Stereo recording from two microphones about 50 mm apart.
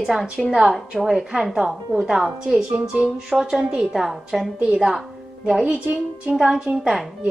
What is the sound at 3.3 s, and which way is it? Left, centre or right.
Speech, centre.